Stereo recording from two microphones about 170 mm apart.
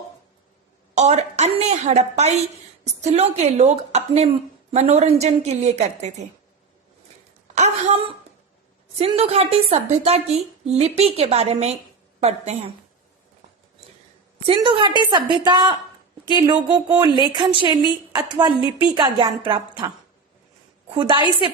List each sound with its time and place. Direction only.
0.9 s a sound: 40° right (ahead or behind)
2.8 s a woman's voice: 40° right (ahead or behind)
7.5 s a sound: 40° right (ahead or behind)
9.0 s a woman's voice: 35° right (ahead or behind)
14.4 s a woman's voice: 30° right (ahead or behind)
20.9 s a woman's voice: 30° right (ahead or behind)